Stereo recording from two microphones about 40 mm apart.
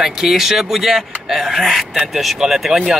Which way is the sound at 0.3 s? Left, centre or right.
Centre.